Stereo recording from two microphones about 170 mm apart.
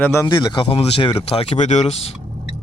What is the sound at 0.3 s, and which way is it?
Speech, 25° left (ahead or behind).